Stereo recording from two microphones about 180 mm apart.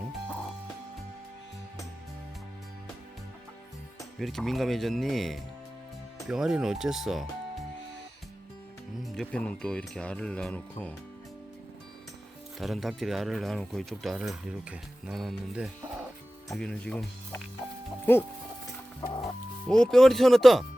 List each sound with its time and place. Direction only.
4.2 s speech: centre (ahead or behind)
9.0 s speech: 5° left (ahead or behind)
12.5 s speech: centre (ahead or behind)
19.0 s music: 25° left (ahead or behind)
19.6 s speech: 5° left (ahead or behind)